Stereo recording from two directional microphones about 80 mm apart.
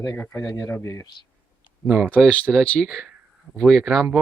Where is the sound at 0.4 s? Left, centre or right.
Left.